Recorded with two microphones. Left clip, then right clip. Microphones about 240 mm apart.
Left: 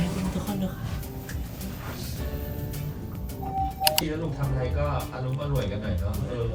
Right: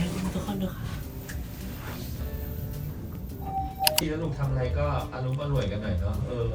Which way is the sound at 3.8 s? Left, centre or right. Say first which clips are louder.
Even; centre.